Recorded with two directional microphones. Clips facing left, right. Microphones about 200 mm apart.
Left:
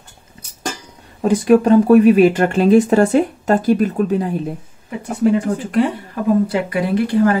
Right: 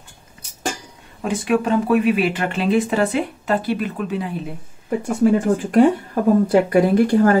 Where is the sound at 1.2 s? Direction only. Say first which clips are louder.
Left 7 dB; 40° left (ahead or behind).